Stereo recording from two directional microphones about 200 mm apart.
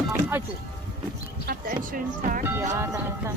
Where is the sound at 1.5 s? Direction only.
45° right (ahead or behind).